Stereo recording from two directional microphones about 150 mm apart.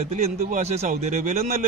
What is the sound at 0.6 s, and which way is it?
A man's voice, 45° right (ahead or behind).